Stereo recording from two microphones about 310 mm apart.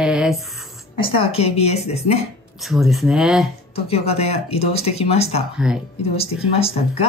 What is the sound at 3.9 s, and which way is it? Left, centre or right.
Speech, centre.